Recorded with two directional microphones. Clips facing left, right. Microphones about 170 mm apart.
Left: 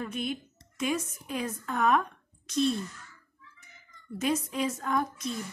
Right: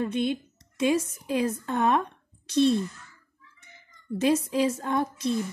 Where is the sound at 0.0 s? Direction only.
30° right (ahead or behind).